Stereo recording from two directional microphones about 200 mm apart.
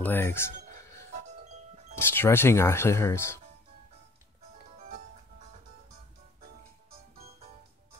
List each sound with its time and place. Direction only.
0.0 s speech: 10° left (ahead or behind)
1.4 s music: 35° right (ahead or behind)
2.0 s speech: 10° left (ahead or behind)